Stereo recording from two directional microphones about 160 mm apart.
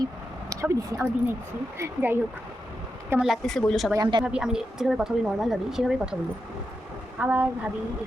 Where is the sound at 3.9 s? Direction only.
25° right (ahead or behind).